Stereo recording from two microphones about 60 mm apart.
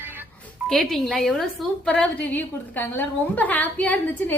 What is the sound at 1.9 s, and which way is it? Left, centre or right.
A woman's voice, left.